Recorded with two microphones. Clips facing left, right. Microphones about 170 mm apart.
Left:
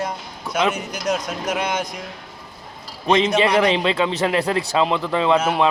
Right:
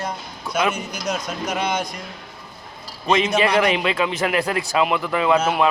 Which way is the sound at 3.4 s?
25° left (ahead or behind).